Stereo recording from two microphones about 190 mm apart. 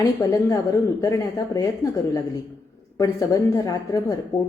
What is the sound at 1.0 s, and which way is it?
Speech, 20° left (ahead or behind).